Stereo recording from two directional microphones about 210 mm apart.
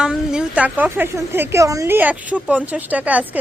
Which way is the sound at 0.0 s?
5° right (ahead or behind).